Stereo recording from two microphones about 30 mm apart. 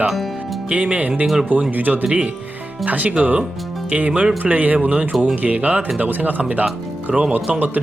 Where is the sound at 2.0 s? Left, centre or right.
Right.